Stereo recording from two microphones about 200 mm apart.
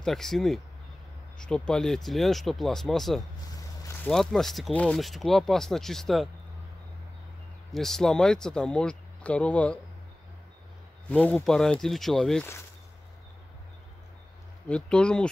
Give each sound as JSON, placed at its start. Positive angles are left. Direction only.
{"t": 0.0, "sound": "speech", "side_deg": 0}
{"t": 3.5, "sound": "a sound", "side_deg": 15}
{"t": 4.1, "sound": "speech", "side_deg": 0}
{"t": 7.7, "sound": "speech", "side_deg": 0}
{"t": 11.1, "sound": "speech", "side_deg": 5}
{"t": 14.7, "sound": "speech", "side_deg": 5}